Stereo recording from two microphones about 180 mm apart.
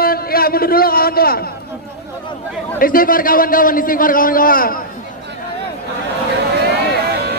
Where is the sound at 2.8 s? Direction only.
50° left (ahead or behind).